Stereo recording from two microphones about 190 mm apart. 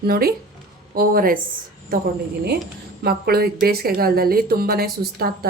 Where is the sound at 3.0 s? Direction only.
55° right (ahead or behind).